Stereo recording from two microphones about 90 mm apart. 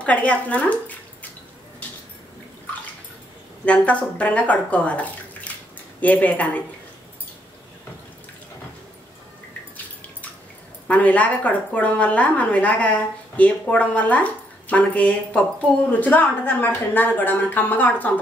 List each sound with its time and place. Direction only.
0.0 s a woman's voice: 15° left (ahead or behind)
3.6 s a woman's voice: 15° left (ahead or behind)
10.9 s a woman's voice: 15° left (ahead or behind)